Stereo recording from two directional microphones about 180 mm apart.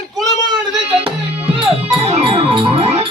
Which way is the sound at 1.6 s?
35° right (ahead or behind).